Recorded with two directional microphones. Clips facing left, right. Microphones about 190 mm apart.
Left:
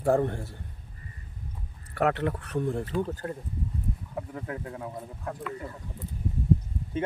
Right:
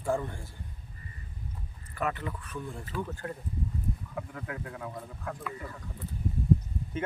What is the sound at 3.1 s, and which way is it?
Speech, 30° left (ahead or behind).